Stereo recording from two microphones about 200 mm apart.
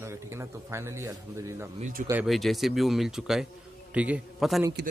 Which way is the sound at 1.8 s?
40° right (ahead or behind).